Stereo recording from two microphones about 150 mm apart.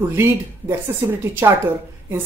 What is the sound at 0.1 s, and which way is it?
A woman's voice, 15° right (ahead or behind).